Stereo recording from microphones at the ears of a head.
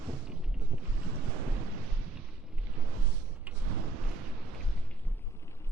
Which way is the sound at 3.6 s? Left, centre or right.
Right.